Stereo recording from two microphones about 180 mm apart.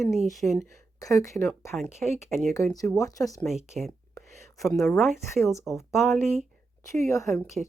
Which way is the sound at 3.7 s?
Centre (ahead or behind).